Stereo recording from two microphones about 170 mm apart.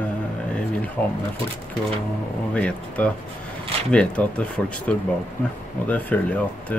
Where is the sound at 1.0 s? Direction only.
10° left (ahead or behind).